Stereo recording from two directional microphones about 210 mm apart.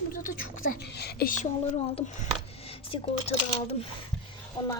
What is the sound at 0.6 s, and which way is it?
Speech, 50° left (ahead or behind).